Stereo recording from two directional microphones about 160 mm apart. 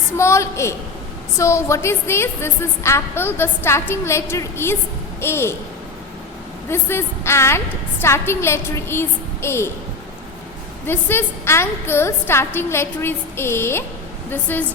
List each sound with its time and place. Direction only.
0.2 s a woman's voice: 15° left (ahead or behind)
6.7 s a woman's voice: 15° left (ahead or behind)
10.8 s a woman's voice: 15° left (ahead or behind)